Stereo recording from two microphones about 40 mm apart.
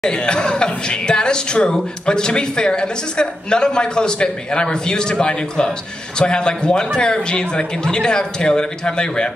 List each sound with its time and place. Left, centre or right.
0.0 s speech: left